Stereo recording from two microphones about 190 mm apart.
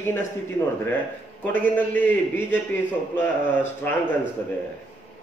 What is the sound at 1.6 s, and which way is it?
Speech, 10° left (ahead or behind).